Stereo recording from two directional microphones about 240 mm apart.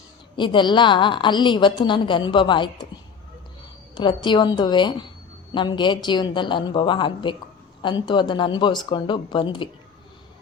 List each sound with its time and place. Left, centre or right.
0.3 s a woman's voice: centre
3.9 s a woman's voice: centre